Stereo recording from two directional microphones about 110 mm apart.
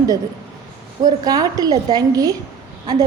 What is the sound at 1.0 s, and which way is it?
A woman's voice, 35° right (ahead or behind).